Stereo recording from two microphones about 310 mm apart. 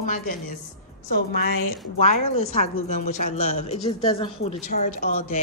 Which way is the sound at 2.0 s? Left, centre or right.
Left.